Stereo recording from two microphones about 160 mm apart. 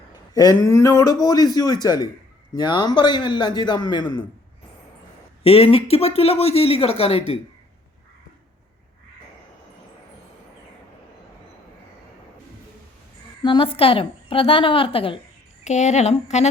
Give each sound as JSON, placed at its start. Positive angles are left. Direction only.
{"t": 0.3, "sound": "a man's voice", "side_deg": 25}
{"t": 5.4, "sound": "speech", "side_deg": 40}
{"t": 13.4, "sound": "speech", "side_deg": 35}
{"t": 15.6, "sound": "speech", "side_deg": 45}